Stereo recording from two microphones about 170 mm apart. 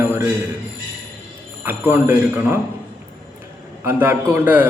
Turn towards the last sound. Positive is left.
turn(degrees=-10)  # may be behind; listen again after turning